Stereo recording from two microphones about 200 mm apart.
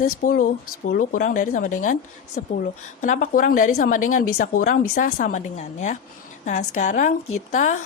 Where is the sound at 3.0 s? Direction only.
40° left (ahead or behind).